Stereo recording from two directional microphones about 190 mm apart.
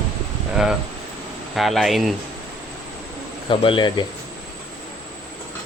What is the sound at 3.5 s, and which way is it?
Speech, 25° left (ahead or behind).